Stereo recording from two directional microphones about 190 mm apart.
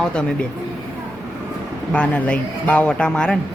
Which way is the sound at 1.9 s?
5° left (ahead or behind).